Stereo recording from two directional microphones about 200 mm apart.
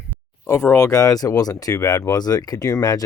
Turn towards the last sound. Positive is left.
turn(degrees=20)  # may be behind; listen again after turning